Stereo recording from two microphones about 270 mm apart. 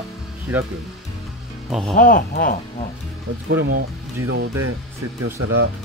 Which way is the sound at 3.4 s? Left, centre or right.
Right.